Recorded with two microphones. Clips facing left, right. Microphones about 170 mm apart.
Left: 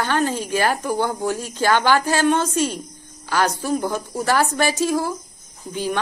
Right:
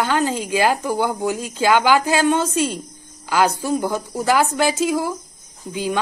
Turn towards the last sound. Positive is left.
turn(degrees=-15)  # may be behind; listen again after turning